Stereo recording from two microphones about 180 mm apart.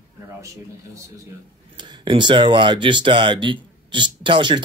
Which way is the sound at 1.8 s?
25° right (ahead or behind).